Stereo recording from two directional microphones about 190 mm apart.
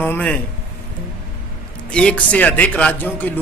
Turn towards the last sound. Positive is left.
turn(degrees=10)  # may be behind; listen again after turning